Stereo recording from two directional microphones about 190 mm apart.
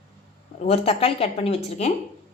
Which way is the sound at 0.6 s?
35° left (ahead or behind).